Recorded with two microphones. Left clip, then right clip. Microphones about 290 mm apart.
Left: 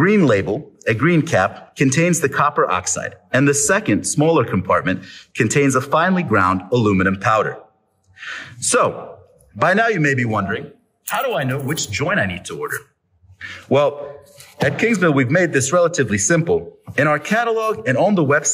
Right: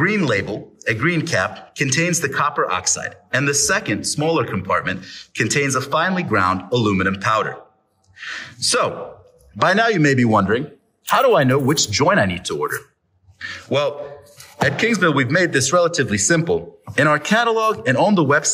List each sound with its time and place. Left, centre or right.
0.0 s a man's voice: centre
13.4 s a man's voice: centre